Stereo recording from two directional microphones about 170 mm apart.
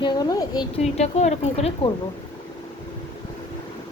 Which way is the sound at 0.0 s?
25° left (ahead or behind).